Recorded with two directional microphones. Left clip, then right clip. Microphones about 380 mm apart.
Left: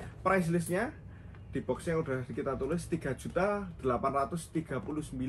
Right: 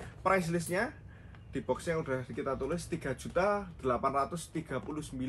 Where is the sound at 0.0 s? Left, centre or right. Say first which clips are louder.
Even; centre.